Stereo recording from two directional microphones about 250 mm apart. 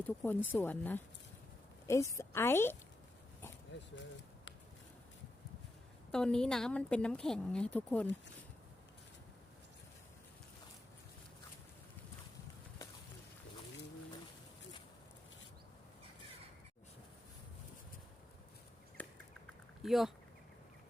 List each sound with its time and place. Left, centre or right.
0.0 s speech: centre
2.1 s speech: centre
6.1 s speech: centre
19.0 s bird: centre
19.8 s speech: centre